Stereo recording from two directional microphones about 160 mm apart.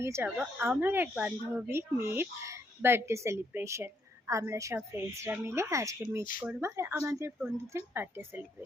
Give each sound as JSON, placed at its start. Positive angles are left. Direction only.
{"t": 0.0, "sound": "speech", "side_deg": -15}